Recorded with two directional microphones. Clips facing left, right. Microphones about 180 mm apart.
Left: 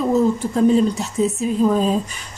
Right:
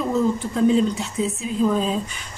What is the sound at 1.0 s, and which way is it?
Speech, 45° left (ahead or behind).